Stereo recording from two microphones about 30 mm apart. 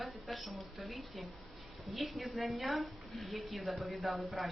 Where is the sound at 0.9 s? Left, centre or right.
Centre.